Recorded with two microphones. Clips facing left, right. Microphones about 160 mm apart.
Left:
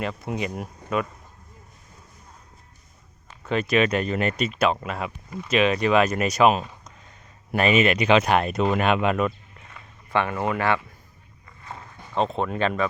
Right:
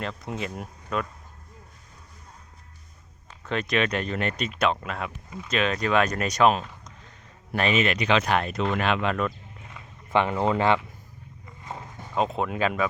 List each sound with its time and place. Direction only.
0.0 s speech: 5° left (ahead or behind)
3.4 s speech: 5° left (ahead or behind)
9.6 s a sound: 15° right (ahead or behind)
12.1 s speech: 5° right (ahead or behind)